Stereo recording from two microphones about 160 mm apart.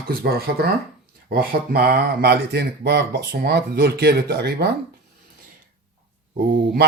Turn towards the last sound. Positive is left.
turn(degrees=-80)